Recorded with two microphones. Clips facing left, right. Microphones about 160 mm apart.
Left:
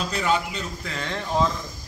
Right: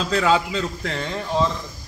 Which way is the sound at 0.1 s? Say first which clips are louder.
Right 7 dB; 90° right.